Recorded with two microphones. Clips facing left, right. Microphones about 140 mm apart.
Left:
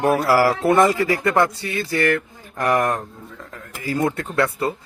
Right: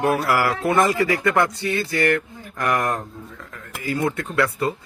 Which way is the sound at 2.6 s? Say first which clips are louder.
Left 3 dB; 35° left (ahead or behind).